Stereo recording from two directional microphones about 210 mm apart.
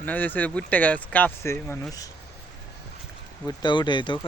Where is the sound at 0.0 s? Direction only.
10° left (ahead or behind).